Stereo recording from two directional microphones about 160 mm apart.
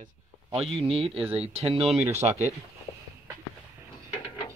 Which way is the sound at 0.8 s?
35° right (ahead or behind).